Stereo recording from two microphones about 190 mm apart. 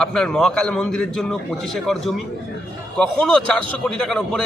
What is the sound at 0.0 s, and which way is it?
A man's voice, 5° left (ahead or behind).